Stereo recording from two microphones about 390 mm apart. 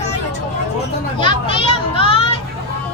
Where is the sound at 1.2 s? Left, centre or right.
Centre.